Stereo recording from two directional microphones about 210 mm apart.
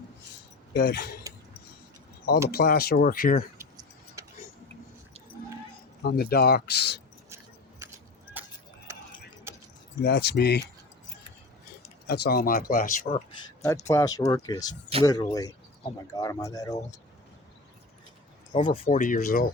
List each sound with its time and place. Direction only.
0.7 s speech: 50° left (ahead or behind)
2.5 s speech: 45° left (ahead or behind)
3.6 s keys jangling: 15° right (ahead or behind)
6.0 s speech: 50° left (ahead or behind)
8.4 s keys jangling: 10° right (ahead or behind)
10.0 s speech: 55° left (ahead or behind)
12.0 s speech: 50° left (ahead or behind)
13.9 s speech: 15° left (ahead or behind)
18.5 s speech: 40° left (ahead or behind)